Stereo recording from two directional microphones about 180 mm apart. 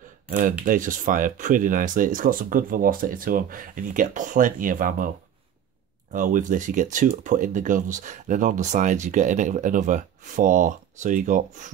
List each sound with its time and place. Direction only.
0.3 s speech: 50° right (ahead or behind)
6.1 s speech: 45° right (ahead or behind)